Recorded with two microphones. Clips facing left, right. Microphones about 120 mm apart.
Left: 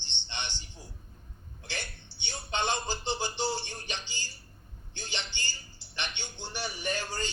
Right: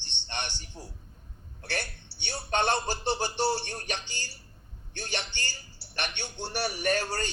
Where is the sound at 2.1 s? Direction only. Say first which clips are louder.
Right 2 dB; 70° right (ahead or behind).